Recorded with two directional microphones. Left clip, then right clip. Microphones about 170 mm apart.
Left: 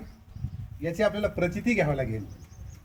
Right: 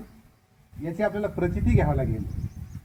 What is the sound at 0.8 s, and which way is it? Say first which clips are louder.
Speech: left 1 dB; 25° left (ahead or behind).